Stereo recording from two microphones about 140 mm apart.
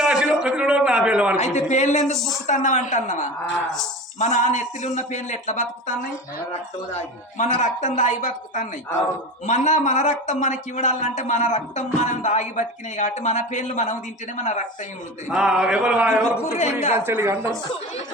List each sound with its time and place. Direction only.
0.0 s a sound: 5° right (ahead or behind)
1.4 s speech: 55° left (ahead or behind)
15.3 s mantra: 5° right (ahead or behind)
16.5 s speech: 55° left (ahead or behind)
16.9 s mantra: 15° right (ahead or behind)